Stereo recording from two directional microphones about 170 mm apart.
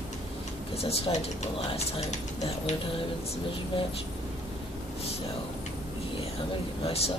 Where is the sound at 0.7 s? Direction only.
35° left (ahead or behind).